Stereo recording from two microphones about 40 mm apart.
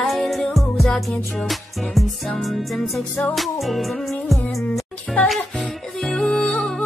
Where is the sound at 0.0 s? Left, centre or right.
Centre.